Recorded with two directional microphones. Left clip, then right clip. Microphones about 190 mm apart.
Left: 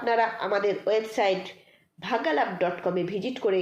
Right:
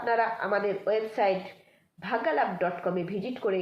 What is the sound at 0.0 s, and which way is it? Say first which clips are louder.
A woman's voice: left 2 dB; 40° left (ahead or behind).